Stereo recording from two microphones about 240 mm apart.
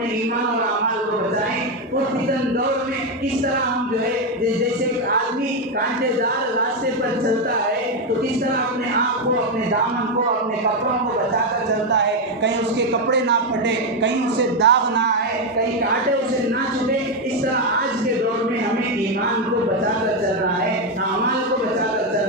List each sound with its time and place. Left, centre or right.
11.9 s speech: right
14.6 s speech: right